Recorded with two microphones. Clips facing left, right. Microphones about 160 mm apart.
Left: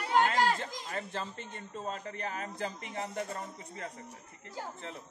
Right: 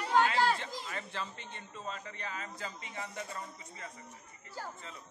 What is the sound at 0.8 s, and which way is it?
A man's voice, 40° left (ahead or behind).